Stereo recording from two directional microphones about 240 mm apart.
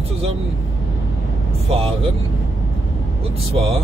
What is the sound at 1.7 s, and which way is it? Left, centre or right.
Speech, right.